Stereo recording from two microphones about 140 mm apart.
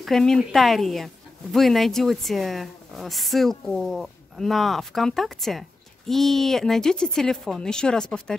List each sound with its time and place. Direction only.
0.0 s speech: 5° left (ahead or behind)